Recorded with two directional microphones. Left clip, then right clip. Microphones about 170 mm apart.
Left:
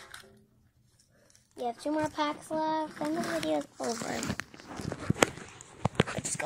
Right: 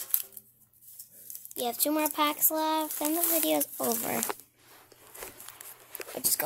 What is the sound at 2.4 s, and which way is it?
Speech, 50° right (ahead or behind).